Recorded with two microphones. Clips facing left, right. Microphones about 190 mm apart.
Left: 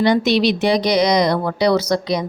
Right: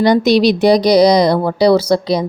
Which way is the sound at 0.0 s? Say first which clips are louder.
Right 4 dB; 40° right (ahead or behind).